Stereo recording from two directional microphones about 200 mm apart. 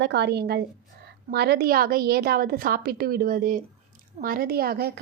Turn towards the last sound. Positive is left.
turn(degrees=-50)  # may be behind; listen again after turning